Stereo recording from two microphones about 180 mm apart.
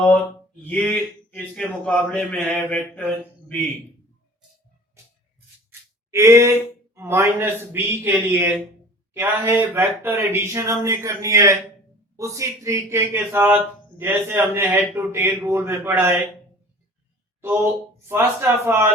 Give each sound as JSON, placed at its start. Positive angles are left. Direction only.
{"t": 0.6, "sound": "speech", "side_deg": 10}
{"t": 5.0, "sound": "a sound", "side_deg": -15}
{"t": 6.1, "sound": "a man's voice", "side_deg": -15}
{"t": 18.1, "sound": "a man's voice", "side_deg": -15}